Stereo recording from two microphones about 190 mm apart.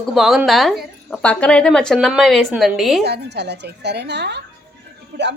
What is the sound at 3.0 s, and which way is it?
A woman's voice, 60° right (ahead or behind).